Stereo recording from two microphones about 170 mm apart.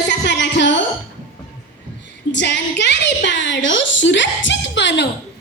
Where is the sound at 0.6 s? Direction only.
90° left.